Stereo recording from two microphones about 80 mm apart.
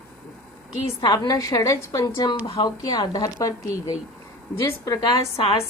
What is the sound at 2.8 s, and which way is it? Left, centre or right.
Speech, left.